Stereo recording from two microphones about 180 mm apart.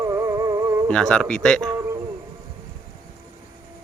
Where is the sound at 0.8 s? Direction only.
5° left (ahead or behind).